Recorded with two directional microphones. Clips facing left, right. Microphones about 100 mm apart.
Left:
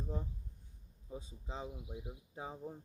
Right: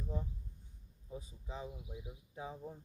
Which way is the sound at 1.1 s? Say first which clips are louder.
Left 1 dB; 25° left (ahead or behind).